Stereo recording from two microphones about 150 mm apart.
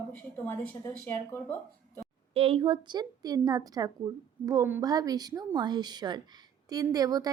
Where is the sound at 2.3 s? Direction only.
40° right (ahead or behind).